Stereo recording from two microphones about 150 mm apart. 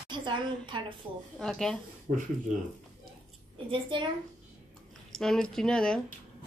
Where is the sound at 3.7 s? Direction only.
35° right (ahead or behind).